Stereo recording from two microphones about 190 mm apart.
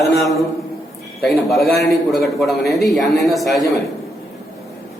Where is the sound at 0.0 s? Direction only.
Centre (ahead or behind).